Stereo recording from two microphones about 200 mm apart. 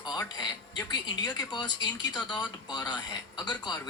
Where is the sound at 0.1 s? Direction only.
20° left (ahead or behind).